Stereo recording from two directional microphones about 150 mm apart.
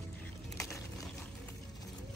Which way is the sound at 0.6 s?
20° left (ahead or behind).